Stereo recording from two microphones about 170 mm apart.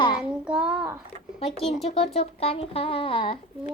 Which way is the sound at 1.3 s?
35° left (ahead or behind).